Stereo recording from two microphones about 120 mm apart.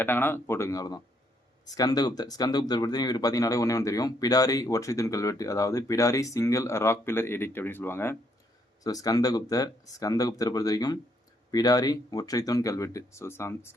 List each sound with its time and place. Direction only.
0.0 s speech: 15° left (ahead or behind)
8.8 s speech: 30° left (ahead or behind)